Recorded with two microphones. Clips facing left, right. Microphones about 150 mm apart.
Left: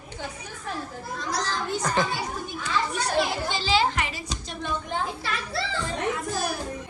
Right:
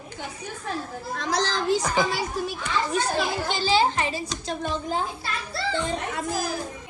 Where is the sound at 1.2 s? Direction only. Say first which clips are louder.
Right 4 dB; 90° right.